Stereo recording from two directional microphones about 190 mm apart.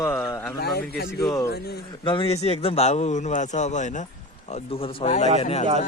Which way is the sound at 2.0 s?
25° left (ahead or behind).